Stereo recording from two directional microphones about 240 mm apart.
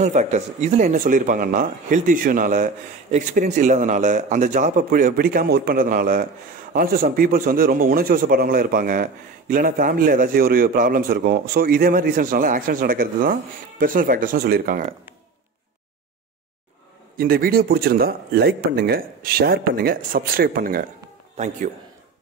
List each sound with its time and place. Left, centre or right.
0.0 s a man's voice: right
17.2 s a man's voice: right